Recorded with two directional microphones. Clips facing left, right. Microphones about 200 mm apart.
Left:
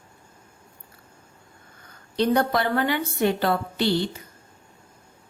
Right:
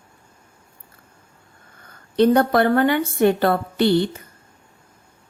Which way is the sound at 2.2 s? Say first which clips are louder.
Right 6 dB; 50° right (ahead or behind).